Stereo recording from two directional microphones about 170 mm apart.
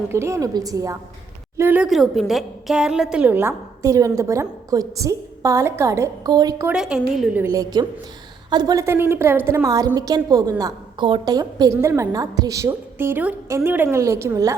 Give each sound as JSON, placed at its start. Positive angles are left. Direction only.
{"t": 0.1, "sound": "a woman's voice", "side_deg": -15}
{"t": 6.7, "sound": "a woman's voice", "side_deg": -5}